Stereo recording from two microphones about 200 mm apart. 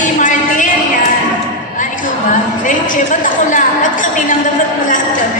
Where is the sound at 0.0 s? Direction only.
40° left (ahead or behind).